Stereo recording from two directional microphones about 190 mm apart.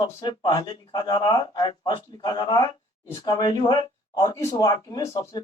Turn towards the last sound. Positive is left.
turn(degrees=20)  # may be behind; listen again after turning